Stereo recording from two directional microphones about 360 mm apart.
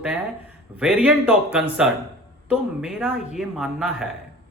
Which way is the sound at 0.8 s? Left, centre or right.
Centre.